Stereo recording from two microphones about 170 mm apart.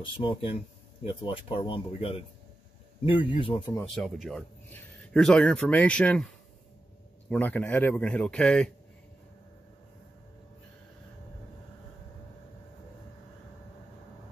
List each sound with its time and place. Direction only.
0.2 s speech: 30° left (ahead or behind)
3.9 s speech: 5° left (ahead or behind)
7.2 s a man's voice: 10° left (ahead or behind)